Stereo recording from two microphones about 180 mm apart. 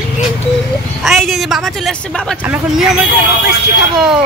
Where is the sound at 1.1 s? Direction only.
Centre (ahead or behind).